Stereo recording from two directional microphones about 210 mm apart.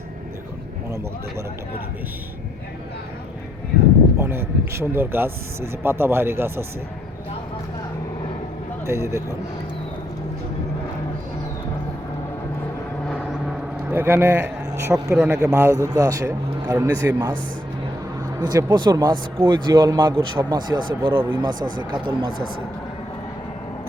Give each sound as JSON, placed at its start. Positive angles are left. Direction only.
{"t": 0.9, "sound": "speech", "side_deg": -15}
{"t": 4.2, "sound": "speech", "side_deg": -10}
{"t": 8.9, "sound": "speech", "side_deg": -15}
{"t": 13.1, "sound": "vehicle", "side_deg": 5}
{"t": 13.9, "sound": "speech", "side_deg": -10}
{"t": 18.3, "sound": "speech", "side_deg": -20}